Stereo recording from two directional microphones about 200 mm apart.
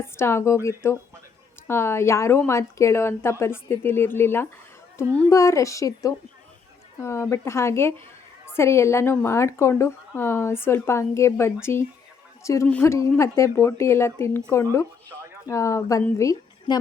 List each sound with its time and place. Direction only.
0.0 s a woman's voice: 10° left (ahead or behind)